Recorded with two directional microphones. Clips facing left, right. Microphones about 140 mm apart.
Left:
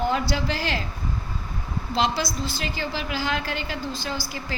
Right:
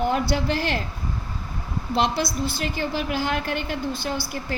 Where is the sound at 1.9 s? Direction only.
55° right (ahead or behind).